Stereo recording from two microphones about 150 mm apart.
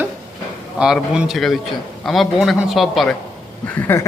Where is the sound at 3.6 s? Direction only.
10° left (ahead or behind).